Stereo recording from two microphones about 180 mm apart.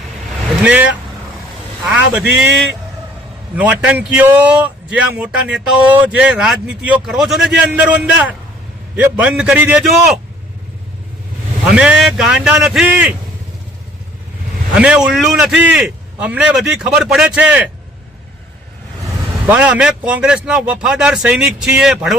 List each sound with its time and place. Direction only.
0.6 s a man's voice: 5° right (ahead or behind)
3.5 s a man's voice: 5° right (ahead or behind)
11.6 s a man's voice: 5° right (ahead or behind)
14.8 s a man's voice: 5° right (ahead or behind)
19.5 s a man's voice: 10° right (ahead or behind)